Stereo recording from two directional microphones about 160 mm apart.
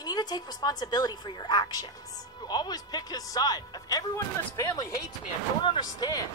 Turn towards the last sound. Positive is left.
turn(degrees=25)  # may be behind; listen again after turning